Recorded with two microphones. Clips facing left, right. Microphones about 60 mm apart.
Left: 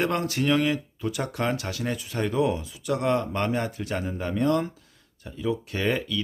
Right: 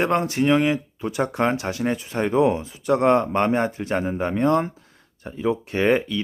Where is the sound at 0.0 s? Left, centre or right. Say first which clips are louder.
Right 5 dB; right.